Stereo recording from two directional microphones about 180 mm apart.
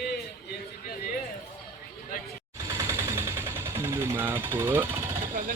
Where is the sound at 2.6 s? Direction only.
15° right (ahead or behind).